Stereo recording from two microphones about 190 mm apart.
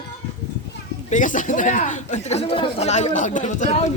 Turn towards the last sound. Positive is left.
turn(degrees=35)  # may be behind; listen again after turning